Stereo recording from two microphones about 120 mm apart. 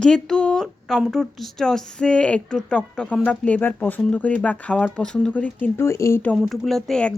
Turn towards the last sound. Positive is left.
turn(degrees=5)  # may be behind; listen again after turning